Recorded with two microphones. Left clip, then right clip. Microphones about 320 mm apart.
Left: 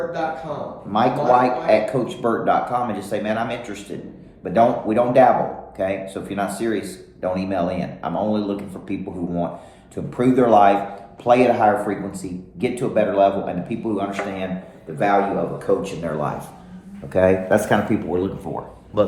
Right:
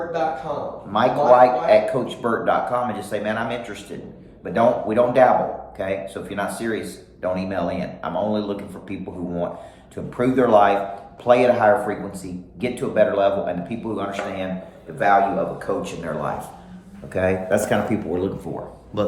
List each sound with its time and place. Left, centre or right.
0.9 s a man's voice: centre